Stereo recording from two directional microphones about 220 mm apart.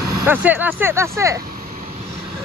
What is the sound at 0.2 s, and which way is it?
Speech, 10° right (ahead or behind).